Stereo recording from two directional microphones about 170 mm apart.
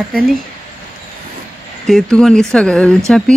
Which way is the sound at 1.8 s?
Centre (ahead or behind).